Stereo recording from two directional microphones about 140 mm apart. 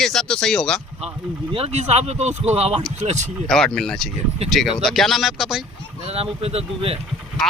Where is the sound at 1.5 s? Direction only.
45° right (ahead or behind).